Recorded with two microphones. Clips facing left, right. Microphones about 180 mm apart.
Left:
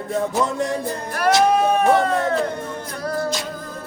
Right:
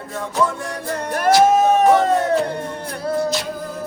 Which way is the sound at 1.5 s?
40° right (ahead or behind).